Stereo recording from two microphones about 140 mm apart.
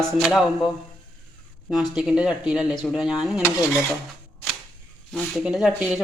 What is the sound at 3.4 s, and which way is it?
Dishes, 20° left (ahead or behind).